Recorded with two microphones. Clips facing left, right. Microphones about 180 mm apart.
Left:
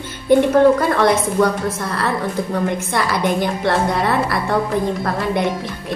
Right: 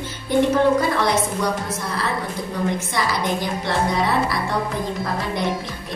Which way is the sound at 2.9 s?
55° left (ahead or behind).